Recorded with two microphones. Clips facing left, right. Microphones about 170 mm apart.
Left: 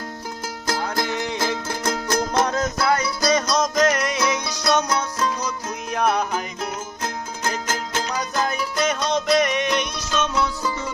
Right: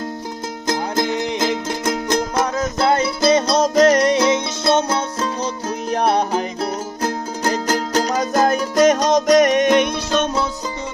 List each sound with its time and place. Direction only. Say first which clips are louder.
0.7 s music: right 4 dB; 20° right (ahead or behind); by 10.3 s 55° right (ahead or behind)
10.3 s music: right 1 dB; 25° right (ahead or behind)